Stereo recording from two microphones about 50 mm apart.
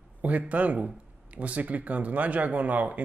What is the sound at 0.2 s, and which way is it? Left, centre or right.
Speech, right.